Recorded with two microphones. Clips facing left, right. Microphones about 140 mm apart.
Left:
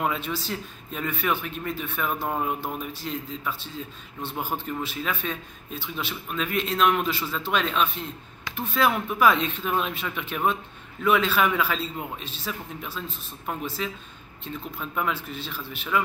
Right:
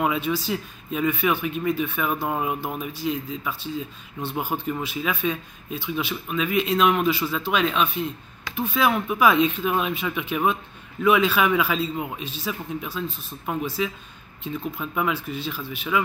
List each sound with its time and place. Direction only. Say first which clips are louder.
0.0 s a man's voice: right 4 dB; 5° right (ahead or behind)
12.8 s a man's voice: right 5 dB; centre (ahead or behind)